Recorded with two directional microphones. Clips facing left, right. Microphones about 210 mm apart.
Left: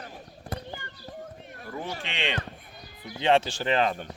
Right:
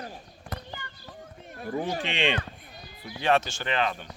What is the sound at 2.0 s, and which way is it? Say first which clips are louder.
Speech: right 5 dB; 15° right (ahead or behind).